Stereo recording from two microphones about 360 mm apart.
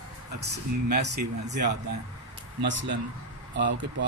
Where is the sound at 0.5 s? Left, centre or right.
Right.